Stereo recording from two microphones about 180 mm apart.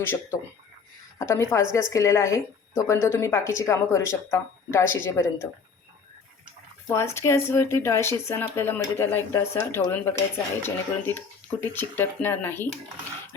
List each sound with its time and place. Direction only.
0.0 s speech: 15° left (ahead or behind)
6.8 s speech: 15° left (ahead or behind)